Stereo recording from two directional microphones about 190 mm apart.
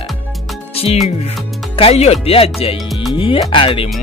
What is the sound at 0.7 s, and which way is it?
Music, 30° left (ahead or behind).